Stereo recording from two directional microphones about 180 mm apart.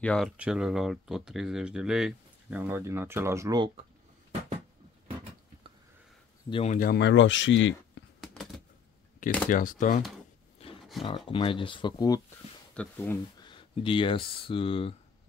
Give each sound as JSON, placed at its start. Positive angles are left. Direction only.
{"t": 0.0, "sound": "speech", "side_deg": 5}
{"t": 6.5, "sound": "speech", "side_deg": 35}
{"t": 6.8, "sound": "speech", "side_deg": 65}
{"t": 8.2, "sound": "a sound", "side_deg": 0}
{"t": 9.5, "sound": "speech", "side_deg": 50}
{"t": 10.8, "sound": "a sound", "side_deg": 0}
{"t": 11.1, "sound": "speech", "side_deg": 30}
{"t": 12.7, "sound": "speech", "side_deg": 10}
{"t": 13.4, "sound": "speech", "side_deg": 25}